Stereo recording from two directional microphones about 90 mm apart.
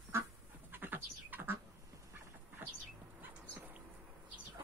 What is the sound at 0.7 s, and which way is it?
Bird, 20° right (ahead or behind).